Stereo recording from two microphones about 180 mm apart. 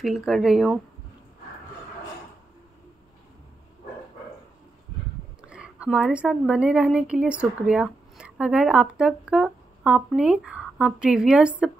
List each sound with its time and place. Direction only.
0.0 s speech: centre (ahead or behind)
5.5 s a woman's voice: 5° right (ahead or behind)